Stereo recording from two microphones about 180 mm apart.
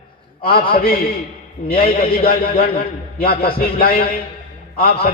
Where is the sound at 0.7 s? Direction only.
55° left (ahead or behind).